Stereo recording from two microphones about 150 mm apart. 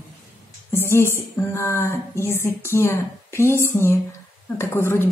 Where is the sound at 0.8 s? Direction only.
15° left (ahead or behind).